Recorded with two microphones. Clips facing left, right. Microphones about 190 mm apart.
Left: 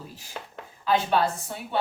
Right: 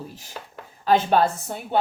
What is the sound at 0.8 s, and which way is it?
Speech, 45° right (ahead or behind).